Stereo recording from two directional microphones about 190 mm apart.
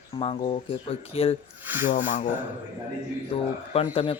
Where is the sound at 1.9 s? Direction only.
45° left (ahead or behind).